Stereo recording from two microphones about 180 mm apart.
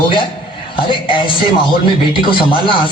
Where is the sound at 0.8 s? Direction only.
30° left (ahead or behind).